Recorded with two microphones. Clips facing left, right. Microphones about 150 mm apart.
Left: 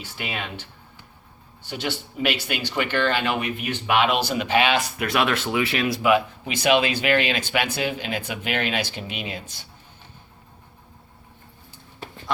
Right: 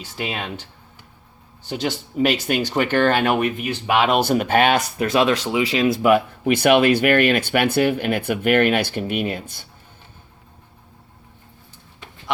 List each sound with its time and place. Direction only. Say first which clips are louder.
0.2 s speech: right 4 dB; 35° right (ahead or behind)
1.6 s speech: right 4 dB; 40° right (ahead or behind)
3.7 s speech: right 1 dB; 40° right (ahead or behind)
4.2 s speech: right 4 dB; 50° right (ahead or behind)
4.9 s speech: right 5 dB; 25° right (ahead or behind)
6.0 s speech: right 3 dB; 50° right (ahead or behind)